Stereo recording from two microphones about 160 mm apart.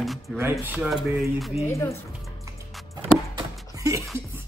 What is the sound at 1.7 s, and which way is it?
Speech, 20° left (ahead or behind).